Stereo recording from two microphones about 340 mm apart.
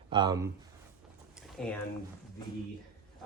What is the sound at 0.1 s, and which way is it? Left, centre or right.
Speech, centre.